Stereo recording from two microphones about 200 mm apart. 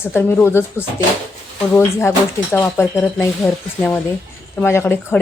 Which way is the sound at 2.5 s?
10° left (ahead or behind).